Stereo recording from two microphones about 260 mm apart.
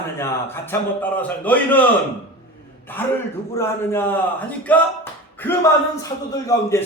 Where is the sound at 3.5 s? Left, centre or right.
Centre.